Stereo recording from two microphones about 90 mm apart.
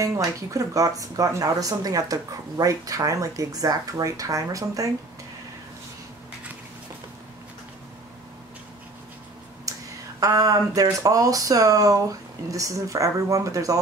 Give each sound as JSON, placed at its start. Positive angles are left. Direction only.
{"t": 0.0, "sound": "speech", "side_deg": -40}
{"t": 9.7, "sound": "a sound", "side_deg": -40}
{"t": 10.2, "sound": "speech", "side_deg": -40}